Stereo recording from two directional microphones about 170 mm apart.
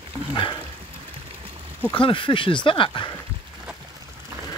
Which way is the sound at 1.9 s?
30° left (ahead or behind).